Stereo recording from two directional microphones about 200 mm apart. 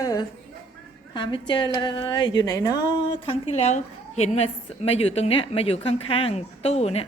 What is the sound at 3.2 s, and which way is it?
A woman's voice, 30° left (ahead or behind).